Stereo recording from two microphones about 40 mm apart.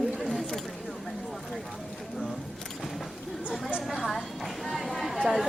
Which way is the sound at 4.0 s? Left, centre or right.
Centre.